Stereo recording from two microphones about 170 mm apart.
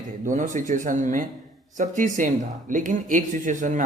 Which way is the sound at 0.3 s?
50° right (ahead or behind).